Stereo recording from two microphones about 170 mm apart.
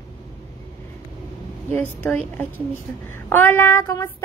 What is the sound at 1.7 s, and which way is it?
Child singing, 10° left (ahead or behind).